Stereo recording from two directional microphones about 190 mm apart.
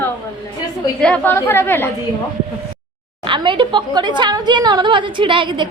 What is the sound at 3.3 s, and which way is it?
A woman's voice, 25° right (ahead or behind).